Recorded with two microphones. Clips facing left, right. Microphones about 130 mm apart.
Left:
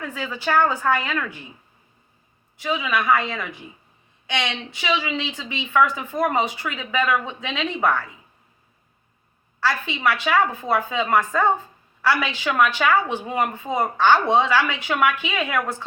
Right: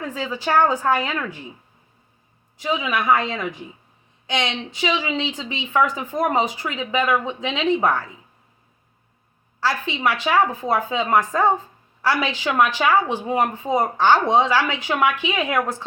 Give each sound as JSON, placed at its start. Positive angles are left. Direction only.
{"t": 0.0, "sound": "a woman's voice", "side_deg": -35}
{"t": 0.4, "sound": "speech", "side_deg": -15}
{"t": 2.6, "sound": "speech", "side_deg": -20}
{"t": 9.6, "sound": "speech", "side_deg": -15}